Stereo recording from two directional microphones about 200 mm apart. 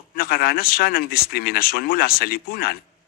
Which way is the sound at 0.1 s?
50° left (ahead or behind).